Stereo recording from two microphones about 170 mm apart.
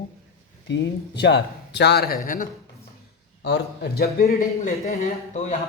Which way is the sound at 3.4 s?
80° left.